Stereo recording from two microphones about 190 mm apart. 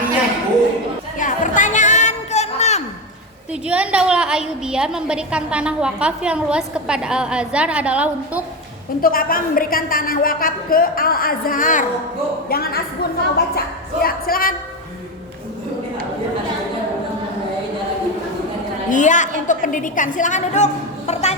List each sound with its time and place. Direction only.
1.2 s a sound: 40° left (ahead or behind)
3.5 s a woman's voice: 5° right (ahead or behind)
9.0 s a woman's voice: 50° left (ahead or behind)
12.5 s a woman's voice: 55° left (ahead or behind)
18.9 s a woman's voice: 40° left (ahead or behind)